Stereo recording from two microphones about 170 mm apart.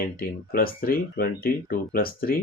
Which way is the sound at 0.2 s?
60° left (ahead or behind).